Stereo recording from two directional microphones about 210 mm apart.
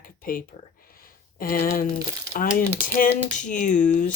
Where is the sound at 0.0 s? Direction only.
40° left (ahead or behind).